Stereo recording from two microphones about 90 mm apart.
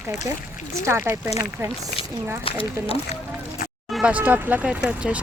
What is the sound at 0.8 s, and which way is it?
Speech, 30° right (ahead or behind).